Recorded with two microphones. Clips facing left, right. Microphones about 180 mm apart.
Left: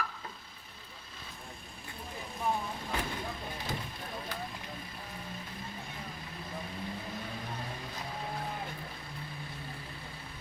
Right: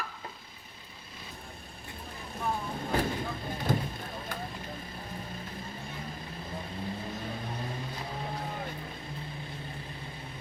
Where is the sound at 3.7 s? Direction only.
50° right (ahead or behind).